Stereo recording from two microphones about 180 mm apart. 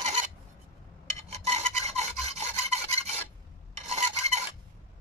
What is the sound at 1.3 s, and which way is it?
Rub, 35° right (ahead or behind).